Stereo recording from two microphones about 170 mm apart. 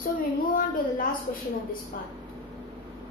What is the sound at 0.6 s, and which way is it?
A woman's voice, 55° left (ahead or behind).